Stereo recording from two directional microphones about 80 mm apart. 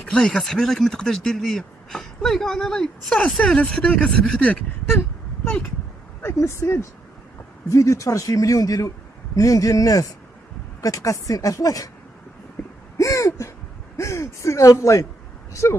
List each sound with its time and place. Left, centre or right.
0.1 s speech: centre
6.2 s speech: left
13.0 s a sound: left
15.6 s speech: left